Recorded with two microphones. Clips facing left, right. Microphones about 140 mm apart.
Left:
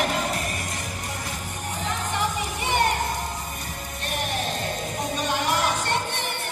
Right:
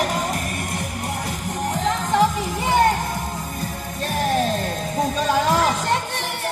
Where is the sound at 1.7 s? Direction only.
90° right.